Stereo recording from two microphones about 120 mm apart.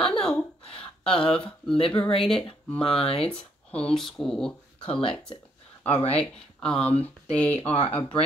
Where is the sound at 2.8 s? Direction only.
50° left (ahead or behind).